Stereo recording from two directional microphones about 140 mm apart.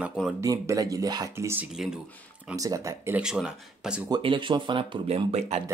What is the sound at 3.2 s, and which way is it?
Speech, 5° right (ahead or behind).